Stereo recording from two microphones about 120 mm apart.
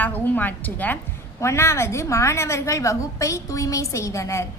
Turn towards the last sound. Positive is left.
turn(degrees=25)  # may be behind; listen again after turning